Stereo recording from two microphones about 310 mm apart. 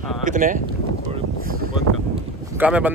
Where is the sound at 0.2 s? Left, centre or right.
Right.